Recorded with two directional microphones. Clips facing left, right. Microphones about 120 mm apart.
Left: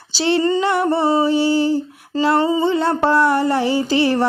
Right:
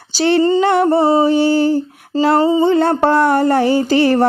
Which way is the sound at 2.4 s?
30° right (ahead or behind).